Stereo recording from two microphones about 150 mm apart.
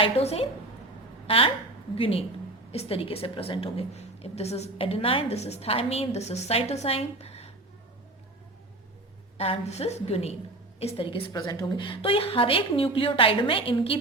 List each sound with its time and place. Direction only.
0.0 s a woman's voice: 40° left (ahead or behind)
9.4 s a woman's voice: 45° left (ahead or behind)
11.3 s a woman's voice: 25° left (ahead or behind)